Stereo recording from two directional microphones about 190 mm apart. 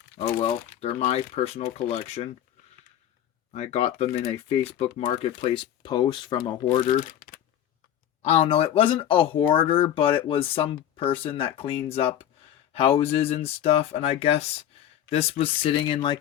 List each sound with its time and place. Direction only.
0.3 s speech: 30° left (ahead or behind)
3.5 s speech: 35° left (ahead or behind)
7.2 s a sound: 50° left (ahead or behind)
8.2 s speech: 35° left (ahead or behind)